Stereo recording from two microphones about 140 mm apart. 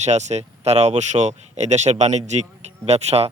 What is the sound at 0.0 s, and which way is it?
Speech, 55° right (ahead or behind).